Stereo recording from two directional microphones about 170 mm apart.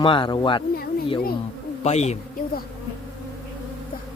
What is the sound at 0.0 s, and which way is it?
Speech, 30° left (ahead or behind).